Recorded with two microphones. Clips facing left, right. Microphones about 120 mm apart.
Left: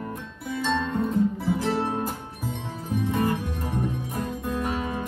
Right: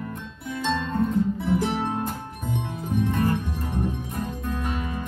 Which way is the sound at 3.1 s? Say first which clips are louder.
Left 1 dB; centre (ahead or behind).